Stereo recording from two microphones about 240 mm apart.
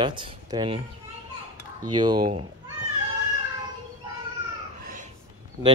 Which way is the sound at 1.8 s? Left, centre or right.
Centre.